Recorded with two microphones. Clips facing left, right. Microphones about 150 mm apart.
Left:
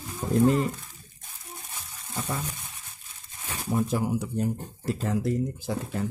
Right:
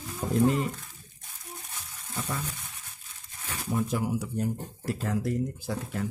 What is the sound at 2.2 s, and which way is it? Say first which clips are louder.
Frying: left 2 dB; 30° left (ahead or behind).